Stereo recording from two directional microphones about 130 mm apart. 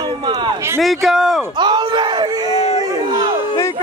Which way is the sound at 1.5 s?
35° right (ahead or behind).